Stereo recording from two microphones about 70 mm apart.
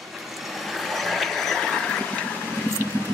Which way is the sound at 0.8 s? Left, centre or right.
Centre.